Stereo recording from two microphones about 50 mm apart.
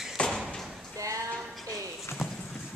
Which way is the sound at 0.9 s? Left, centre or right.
Right.